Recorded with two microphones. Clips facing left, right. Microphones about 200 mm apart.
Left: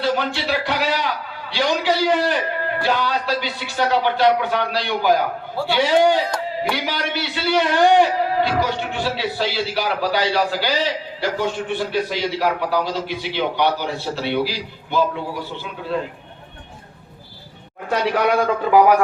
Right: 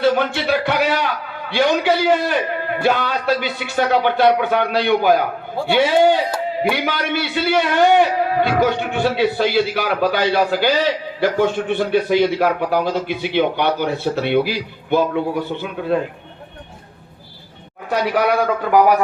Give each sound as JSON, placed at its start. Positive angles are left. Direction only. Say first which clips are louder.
{"t": 0.0, "sound": "a man's voice", "louder": "right 5 dB", "side_deg": -55}
{"t": 17.9, "sound": "a man's voice", "louder": "right 1 dB", "side_deg": -5}